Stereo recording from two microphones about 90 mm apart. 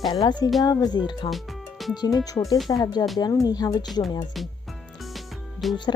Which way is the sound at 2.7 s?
50° left (ahead or behind).